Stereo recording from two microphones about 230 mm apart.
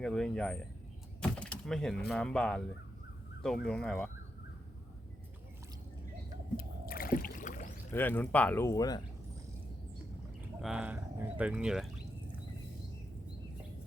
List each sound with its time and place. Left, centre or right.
0.0 s speech: centre
6.8 s rowboat: left
7.9 s speech: centre
10.6 s speech: centre